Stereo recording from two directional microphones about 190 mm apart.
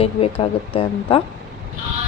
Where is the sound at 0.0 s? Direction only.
30° left (ahead or behind).